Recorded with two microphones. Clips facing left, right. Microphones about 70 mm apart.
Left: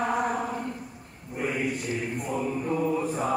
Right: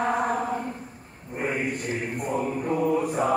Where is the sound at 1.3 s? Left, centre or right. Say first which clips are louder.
Right 1 dB; right.